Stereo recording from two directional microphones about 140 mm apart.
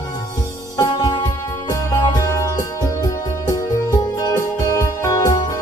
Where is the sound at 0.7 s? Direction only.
30° left (ahead or behind).